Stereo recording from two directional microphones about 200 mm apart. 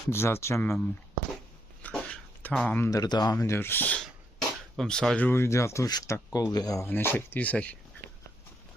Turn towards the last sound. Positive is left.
turn(degrees=5)  # may be behind; listen again after turning